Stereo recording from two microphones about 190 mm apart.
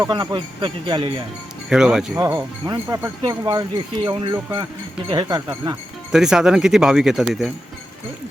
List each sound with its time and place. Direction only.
0.1 s speech: 25° right (ahead or behind)
1.7 s speech: 5° right (ahead or behind)
2.1 s speech: 15° right (ahead or behind)
6.1 s speech: 5° right (ahead or behind)